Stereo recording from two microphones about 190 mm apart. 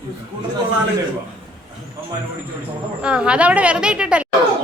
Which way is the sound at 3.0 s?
5° right (ahead or behind).